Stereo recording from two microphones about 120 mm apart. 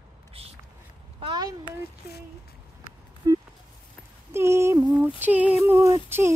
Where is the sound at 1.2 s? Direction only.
40° right (ahead or behind).